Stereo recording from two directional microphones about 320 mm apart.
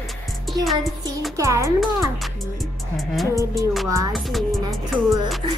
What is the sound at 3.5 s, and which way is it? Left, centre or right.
Speech, centre.